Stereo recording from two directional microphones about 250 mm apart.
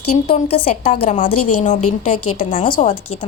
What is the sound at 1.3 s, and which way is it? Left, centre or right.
A woman's voice, left.